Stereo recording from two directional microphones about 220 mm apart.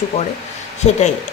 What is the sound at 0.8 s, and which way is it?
Speech, 30° left (ahead or behind).